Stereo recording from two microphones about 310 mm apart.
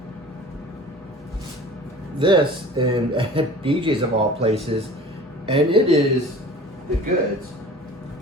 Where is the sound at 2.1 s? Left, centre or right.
Centre.